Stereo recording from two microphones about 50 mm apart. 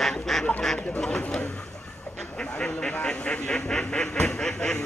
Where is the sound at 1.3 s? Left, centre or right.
Centre.